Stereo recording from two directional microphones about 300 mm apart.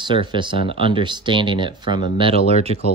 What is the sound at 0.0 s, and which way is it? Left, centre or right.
Speech, centre.